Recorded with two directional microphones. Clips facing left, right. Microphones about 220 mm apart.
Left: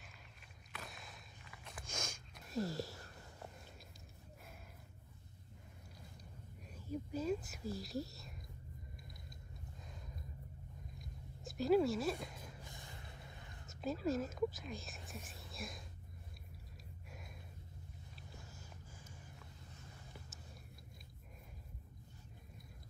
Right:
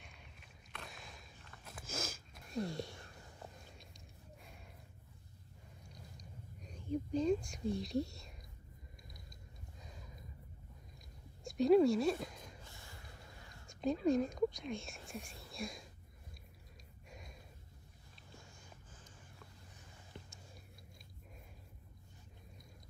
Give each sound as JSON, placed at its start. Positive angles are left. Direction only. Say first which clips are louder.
{"t": 0.0, "sound": "a sound", "louder": "right 1 dB", "side_deg": 0}
{"t": 6.7, "sound": "whispering", "louder": "right 5 dB", "side_deg": 5}
{"t": 9.8, "sound": "a sound", "louder": "even", "side_deg": 0}
{"t": 11.4, "sound": "speech", "louder": "right 5 dB", "side_deg": 0}
{"t": 12.6, "sound": "vehicle", "louder": "left 2 dB", "side_deg": 20}
{"t": 13.7, "sound": "speech", "louder": "right 5 dB", "side_deg": 5}